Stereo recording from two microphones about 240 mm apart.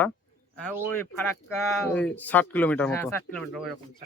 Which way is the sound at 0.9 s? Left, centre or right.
Centre.